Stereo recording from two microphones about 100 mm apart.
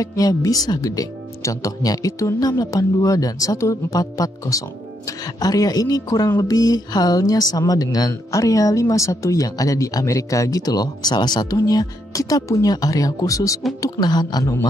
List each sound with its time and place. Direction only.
0.0 s a woman's voice: 35° left (ahead or behind)